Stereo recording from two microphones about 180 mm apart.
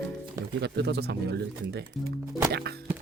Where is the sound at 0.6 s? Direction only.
70° right (ahead or behind).